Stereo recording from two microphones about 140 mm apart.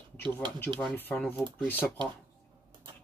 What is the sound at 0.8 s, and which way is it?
Speech, 10° left (ahead or behind).